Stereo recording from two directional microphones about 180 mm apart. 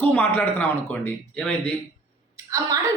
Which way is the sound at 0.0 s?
10° left (ahead or behind).